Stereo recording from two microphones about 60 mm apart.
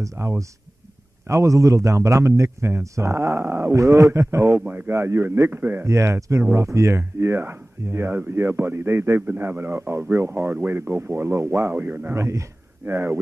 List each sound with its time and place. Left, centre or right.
0.0 s a man's voice: right
4.6 s a man's voice: right
4.9 s a man's voice: right
5.9 s a man's voice: right
9.2 s speech: right
10.9 s speech: right
12.2 s a man's voice: right